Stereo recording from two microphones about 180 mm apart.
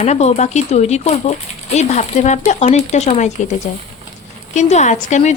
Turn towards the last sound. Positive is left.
turn(degrees=40)  # may be behind; listen again after turning